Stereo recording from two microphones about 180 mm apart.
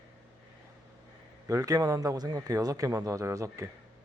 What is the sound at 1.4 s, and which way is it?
A man's voice, 20° right (ahead or behind).